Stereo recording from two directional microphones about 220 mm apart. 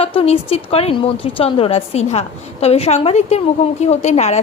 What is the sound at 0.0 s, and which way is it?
A woman's voice, 25° left (ahead or behind).